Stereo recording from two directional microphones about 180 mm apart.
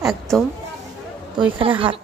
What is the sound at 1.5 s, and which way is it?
Speech, 30° right (ahead or behind).